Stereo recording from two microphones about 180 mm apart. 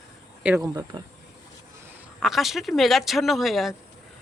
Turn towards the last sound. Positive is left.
turn(degrees=0)  # may be behind; listen again after turning